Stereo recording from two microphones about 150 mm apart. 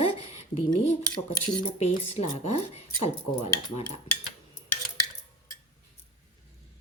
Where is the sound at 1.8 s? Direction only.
50° left (ahead or behind).